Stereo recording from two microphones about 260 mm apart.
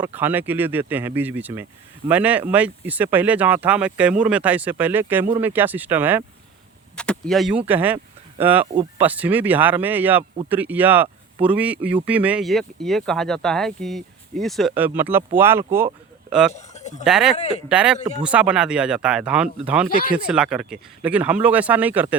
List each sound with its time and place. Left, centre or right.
0.0 s speech: centre
6.9 s speech: centre
16.5 s a sound: left
17.0 s speech: centre
17.3 s speech: left
17.7 s speech: centre